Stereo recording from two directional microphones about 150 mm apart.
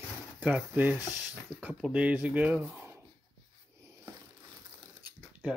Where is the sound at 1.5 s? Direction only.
5° right (ahead or behind).